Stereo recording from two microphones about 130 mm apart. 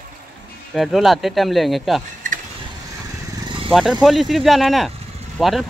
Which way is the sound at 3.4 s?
40° right (ahead or behind).